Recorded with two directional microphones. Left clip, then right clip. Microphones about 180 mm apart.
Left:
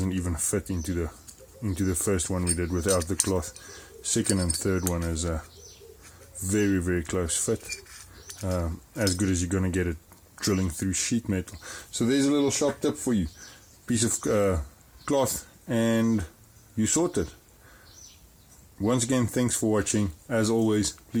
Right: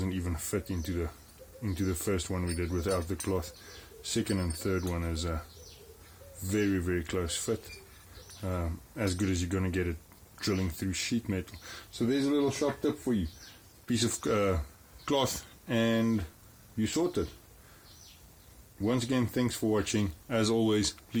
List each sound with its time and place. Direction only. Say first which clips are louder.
0.0 s speech: left 5 dB; 35° left (ahead or behind)
6.5 s speech: left 4 dB; 35° left (ahead or behind)
13.8 s speech: left 4 dB; 35° left (ahead or behind)
18.8 s speech: left 5 dB; 40° left (ahead or behind)